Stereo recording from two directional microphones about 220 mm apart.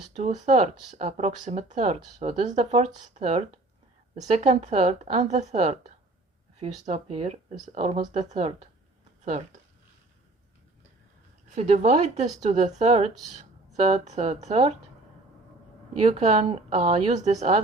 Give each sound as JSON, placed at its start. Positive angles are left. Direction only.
{"t": 0.1, "sound": "speech", "side_deg": -30}
{"t": 11.5, "sound": "speech", "side_deg": -30}
{"t": 16.0, "sound": "speech", "side_deg": -30}